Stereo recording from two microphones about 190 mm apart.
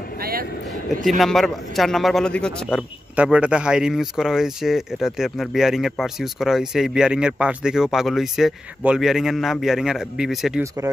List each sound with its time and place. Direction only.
0.2 s vehicle: 50° right (ahead or behind)
1.0 s speech: centre (ahead or behind)
3.2 s speech: 5° right (ahead or behind)